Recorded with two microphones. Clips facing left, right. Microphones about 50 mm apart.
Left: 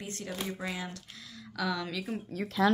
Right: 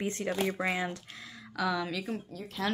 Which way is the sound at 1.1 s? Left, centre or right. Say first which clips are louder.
Right 2 dB; right.